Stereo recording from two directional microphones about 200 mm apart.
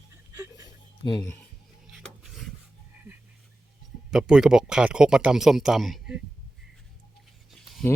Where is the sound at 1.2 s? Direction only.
10° left (ahead or behind).